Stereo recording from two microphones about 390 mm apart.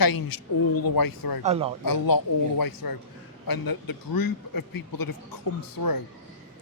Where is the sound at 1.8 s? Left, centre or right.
Left.